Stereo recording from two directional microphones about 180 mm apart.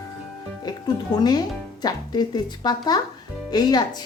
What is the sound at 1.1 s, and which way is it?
A woman's voice, 20° left (ahead or behind).